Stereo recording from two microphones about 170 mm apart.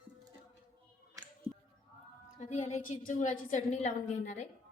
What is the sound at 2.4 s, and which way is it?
A woman's voice, 45° left (ahead or behind).